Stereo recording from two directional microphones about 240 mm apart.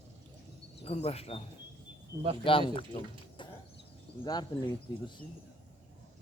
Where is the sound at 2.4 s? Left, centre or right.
Left.